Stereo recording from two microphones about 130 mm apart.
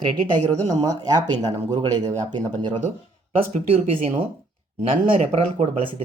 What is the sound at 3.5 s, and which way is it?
Speech, 50° right (ahead or behind).